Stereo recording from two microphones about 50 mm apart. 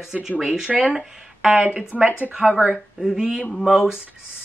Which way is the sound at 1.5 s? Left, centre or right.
Right.